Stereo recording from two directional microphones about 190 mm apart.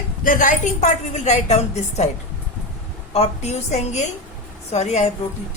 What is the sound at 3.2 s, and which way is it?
A woman's voice, 35° left (ahead or behind).